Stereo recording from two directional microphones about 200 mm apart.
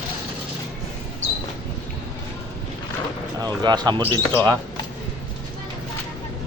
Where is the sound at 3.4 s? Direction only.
20° right (ahead or behind).